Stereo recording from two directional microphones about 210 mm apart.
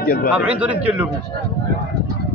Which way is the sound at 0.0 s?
45° left (ahead or behind).